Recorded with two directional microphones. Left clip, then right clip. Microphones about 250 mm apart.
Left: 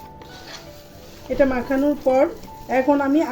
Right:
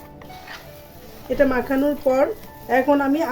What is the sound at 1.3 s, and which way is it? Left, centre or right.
Speech, right.